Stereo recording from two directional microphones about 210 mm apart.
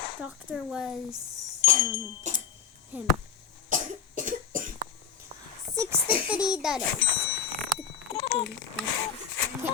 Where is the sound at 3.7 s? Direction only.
40° right (ahead or behind).